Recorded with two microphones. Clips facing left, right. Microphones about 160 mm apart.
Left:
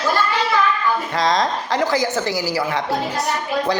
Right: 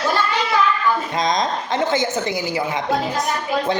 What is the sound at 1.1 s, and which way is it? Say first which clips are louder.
A woman's voice: left 1 dB; 20° right (ahead or behind).